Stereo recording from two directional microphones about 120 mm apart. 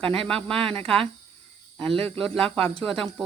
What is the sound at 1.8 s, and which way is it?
Speech, 5° left (ahead or behind).